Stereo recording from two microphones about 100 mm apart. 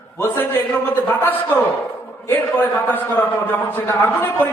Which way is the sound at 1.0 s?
20° left (ahead or behind).